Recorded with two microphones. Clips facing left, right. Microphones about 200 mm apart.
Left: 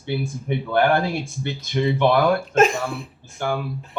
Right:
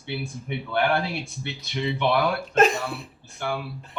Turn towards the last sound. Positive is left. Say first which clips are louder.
# left 4 dB
turn(degrees=45)  # may be behind; listen again after turning